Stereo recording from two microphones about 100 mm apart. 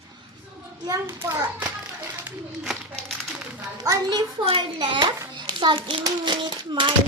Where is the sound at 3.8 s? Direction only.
35° right (ahead or behind).